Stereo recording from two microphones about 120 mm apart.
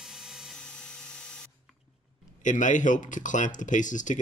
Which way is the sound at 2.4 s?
90° left.